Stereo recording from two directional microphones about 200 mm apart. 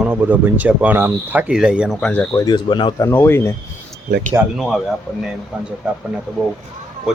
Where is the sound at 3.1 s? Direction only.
10° left (ahead or behind).